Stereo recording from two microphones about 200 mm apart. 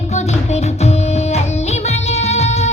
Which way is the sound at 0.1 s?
35° left (ahead or behind).